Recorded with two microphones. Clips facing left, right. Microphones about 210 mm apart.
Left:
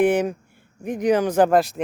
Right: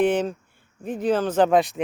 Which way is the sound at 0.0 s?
10° left (ahead or behind).